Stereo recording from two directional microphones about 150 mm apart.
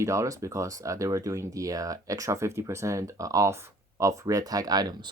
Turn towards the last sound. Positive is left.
turn(degrees=-25)  # may be behind; listen again after turning